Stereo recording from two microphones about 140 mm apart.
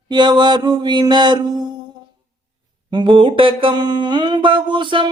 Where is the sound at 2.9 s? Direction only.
35° right (ahead or behind).